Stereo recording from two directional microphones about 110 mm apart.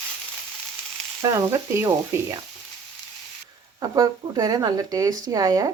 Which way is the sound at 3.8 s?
35° right (ahead or behind).